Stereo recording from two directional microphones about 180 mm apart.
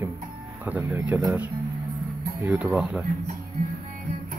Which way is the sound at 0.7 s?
10° right (ahead or behind).